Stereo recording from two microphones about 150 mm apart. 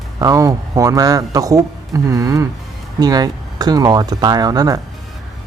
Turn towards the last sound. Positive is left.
turn(degrees=-25)  # may be behind; listen again after turning